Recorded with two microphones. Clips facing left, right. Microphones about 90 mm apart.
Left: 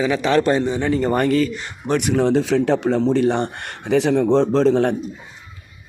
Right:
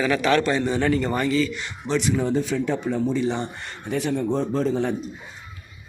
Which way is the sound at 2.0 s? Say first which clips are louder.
Left 5 dB; 65° left (ahead or behind).